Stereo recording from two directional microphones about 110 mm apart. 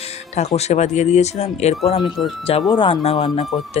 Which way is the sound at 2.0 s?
Centre (ahead or behind).